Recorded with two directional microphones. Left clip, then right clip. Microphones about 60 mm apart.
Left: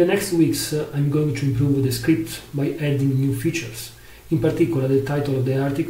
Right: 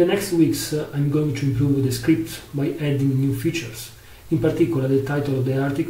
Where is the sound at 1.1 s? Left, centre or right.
Centre.